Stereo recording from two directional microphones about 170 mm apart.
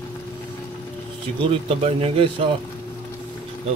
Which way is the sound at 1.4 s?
35° right (ahead or behind).